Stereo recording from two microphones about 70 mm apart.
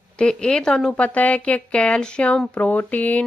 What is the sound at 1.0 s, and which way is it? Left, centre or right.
Speech, centre.